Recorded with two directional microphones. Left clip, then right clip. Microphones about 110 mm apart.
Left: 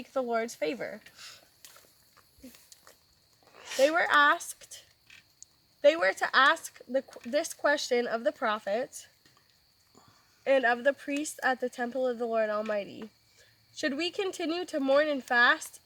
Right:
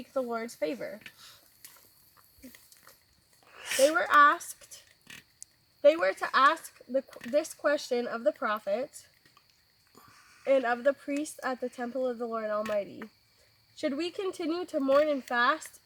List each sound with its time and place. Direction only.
0.1 s speech: 20° left (ahead or behind)
3.6 s a sound: centre (ahead or behind)
3.9 s speech: 20° left (ahead or behind)
5.4 s a sound: 5° left (ahead or behind)
5.8 s speech: 20° left (ahead or behind)
10.0 s speech: 15° left (ahead or behind)